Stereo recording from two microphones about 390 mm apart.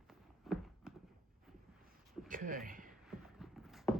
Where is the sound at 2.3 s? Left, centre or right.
Right.